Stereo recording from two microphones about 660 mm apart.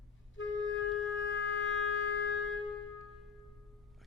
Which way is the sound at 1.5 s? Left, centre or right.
Centre.